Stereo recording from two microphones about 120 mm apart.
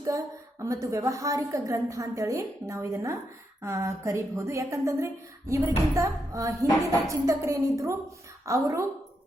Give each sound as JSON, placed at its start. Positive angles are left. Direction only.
{"t": 0.6, "sound": "a woman's voice", "side_deg": -25}